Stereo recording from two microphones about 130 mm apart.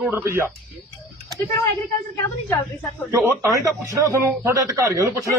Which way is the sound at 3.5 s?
25° right (ahead or behind).